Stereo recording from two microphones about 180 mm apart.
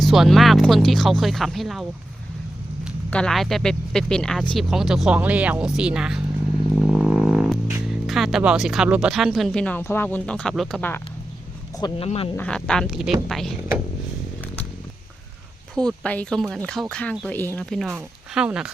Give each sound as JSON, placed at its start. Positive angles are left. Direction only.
{"t": 0.0, "sound": "speech", "side_deg": 0}
{"t": 3.1, "sound": "speech", "side_deg": 5}
{"t": 11.8, "sound": "speech", "side_deg": 30}
{"t": 12.4, "sound": "speech", "side_deg": 5}
{"t": 15.9, "sound": "speech", "side_deg": 5}